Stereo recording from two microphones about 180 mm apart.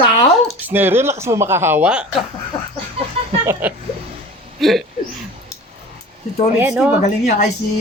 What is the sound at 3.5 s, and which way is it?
Speech, 10° right (ahead or behind).